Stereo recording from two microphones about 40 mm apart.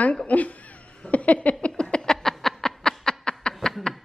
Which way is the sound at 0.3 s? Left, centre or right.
Left.